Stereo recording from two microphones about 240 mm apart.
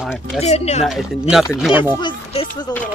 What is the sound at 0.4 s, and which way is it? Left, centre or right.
Speech, left.